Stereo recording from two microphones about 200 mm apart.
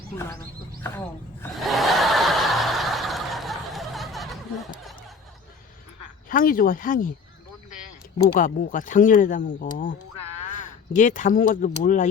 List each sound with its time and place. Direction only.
0.2 s speech: 15° left (ahead or behind)
1.6 s snicker: centre (ahead or behind)
6.2 s speech: 45° left (ahead or behind)
8.4 s speech: 40° left (ahead or behind)